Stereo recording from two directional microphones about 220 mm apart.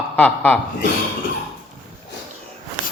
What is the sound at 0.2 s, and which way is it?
Speech, 10° left (ahead or behind).